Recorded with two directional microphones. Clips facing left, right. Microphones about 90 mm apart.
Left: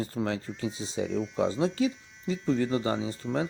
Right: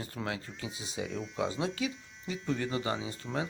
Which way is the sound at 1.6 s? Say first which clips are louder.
Left 7 dB; 35° left (ahead or behind).